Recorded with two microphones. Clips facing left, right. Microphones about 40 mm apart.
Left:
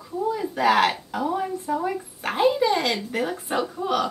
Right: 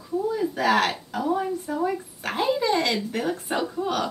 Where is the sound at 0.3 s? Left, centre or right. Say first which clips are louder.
Left 2 dB; centre.